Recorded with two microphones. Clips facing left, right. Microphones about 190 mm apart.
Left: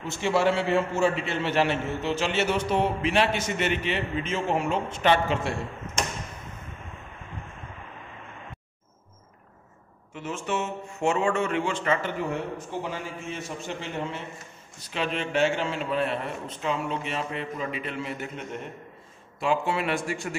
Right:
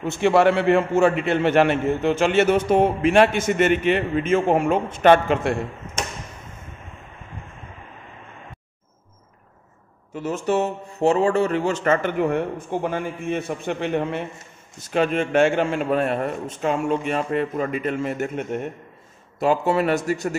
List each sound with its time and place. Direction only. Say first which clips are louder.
0.0 s a man's voice: right 7 dB; 55° right (ahead or behind)
10.1 s a man's voice: right 8 dB; 40° right (ahead or behind)
19.4 s speech: right 6 dB; 40° right (ahead or behind)